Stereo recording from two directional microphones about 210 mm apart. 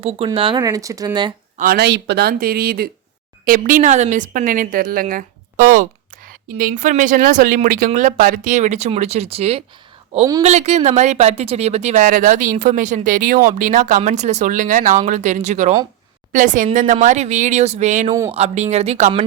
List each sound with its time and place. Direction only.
0.0 s speech: 25° right (ahead or behind)
1.5 s speech: 45° right (ahead or behind)